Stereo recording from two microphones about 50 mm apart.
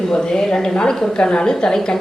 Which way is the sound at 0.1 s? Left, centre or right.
Centre.